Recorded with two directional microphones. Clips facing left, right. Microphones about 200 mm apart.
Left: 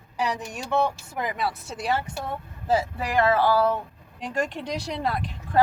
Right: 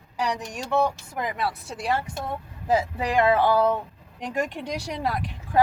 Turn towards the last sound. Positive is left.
turn(degrees=-10)  # may be behind; listen again after turning